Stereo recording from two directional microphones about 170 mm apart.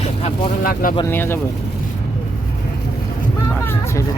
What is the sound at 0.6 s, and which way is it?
Speech, 55° left (ahead or behind).